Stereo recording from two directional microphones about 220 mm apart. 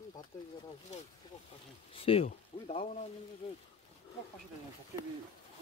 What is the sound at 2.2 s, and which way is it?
Speech, 35° left (ahead or behind).